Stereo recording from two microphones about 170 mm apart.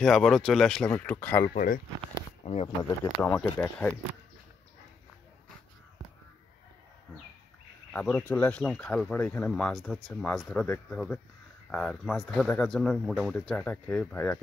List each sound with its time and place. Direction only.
0.0 s speech: 5° left (ahead or behind)
1.5 s speech: 55° left (ahead or behind)
2.4 s speech: 35° left (ahead or behind)
2.8 s speech: 10° left (ahead or behind)
7.9 s speech: 5° left (ahead or behind)